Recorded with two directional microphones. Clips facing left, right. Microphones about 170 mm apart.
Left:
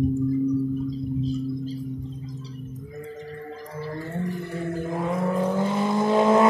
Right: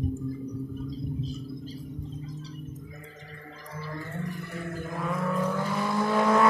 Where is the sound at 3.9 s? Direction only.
35° left (ahead or behind).